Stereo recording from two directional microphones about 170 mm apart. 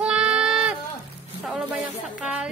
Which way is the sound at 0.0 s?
5° right (ahead or behind).